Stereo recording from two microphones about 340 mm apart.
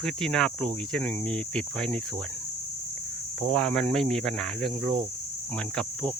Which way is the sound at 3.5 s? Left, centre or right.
Centre.